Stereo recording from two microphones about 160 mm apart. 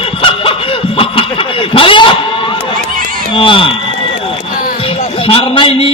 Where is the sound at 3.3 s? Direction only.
35° left (ahead or behind).